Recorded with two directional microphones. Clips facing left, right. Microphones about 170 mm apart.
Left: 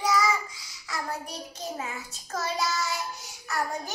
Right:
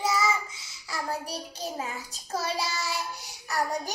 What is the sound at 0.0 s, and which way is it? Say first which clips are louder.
Child singing: left 1 dB; 25° right (ahead or behind).